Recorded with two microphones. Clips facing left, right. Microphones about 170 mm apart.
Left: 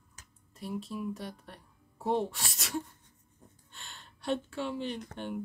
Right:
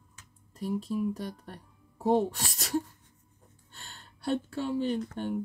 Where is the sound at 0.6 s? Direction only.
40° right (ahead or behind).